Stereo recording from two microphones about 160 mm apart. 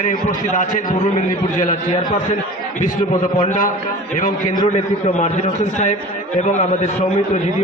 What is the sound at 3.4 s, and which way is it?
A man's voice, 50° left (ahead or behind).